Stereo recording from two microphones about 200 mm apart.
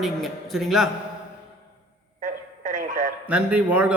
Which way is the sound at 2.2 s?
40° right (ahead or behind).